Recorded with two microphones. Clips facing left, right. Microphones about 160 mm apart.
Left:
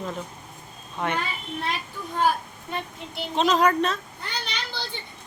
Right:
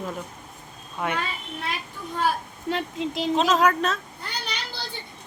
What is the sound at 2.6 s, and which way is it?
Speech, 90° right.